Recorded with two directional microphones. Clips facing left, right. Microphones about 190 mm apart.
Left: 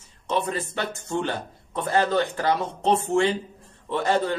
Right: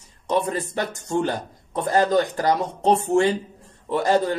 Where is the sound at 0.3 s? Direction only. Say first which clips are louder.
Right 3 dB; 40° right (ahead or behind).